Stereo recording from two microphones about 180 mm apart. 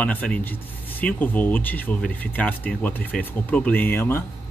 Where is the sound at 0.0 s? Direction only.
10° left (ahead or behind).